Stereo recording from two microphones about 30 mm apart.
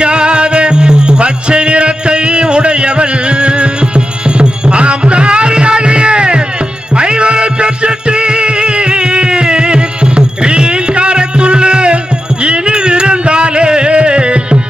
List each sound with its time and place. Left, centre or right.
0.0 s music: right